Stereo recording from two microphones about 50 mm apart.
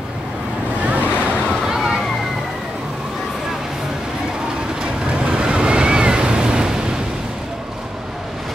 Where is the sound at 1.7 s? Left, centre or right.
Centre.